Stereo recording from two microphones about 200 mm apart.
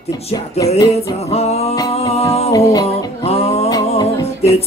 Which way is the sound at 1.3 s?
30° left (ahead or behind).